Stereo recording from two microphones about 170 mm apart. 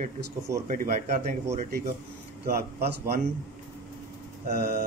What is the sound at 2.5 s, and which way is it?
Speech, 65° right (ahead or behind).